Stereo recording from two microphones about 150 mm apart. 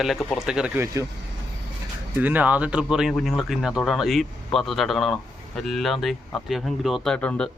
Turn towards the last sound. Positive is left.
turn(degrees=5)  # may be behind; listen again after turning